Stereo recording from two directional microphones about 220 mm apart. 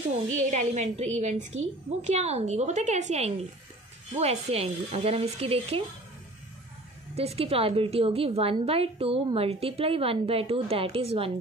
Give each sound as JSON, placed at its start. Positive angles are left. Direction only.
{"t": 0.3, "sound": "a woman's voice", "side_deg": -35}
{"t": 7.2, "sound": "a woman's voice", "side_deg": -25}